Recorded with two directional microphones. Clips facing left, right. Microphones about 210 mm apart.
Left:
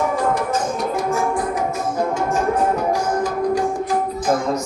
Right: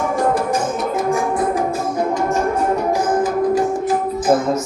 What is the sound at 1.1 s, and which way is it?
Music, 20° right (ahead or behind).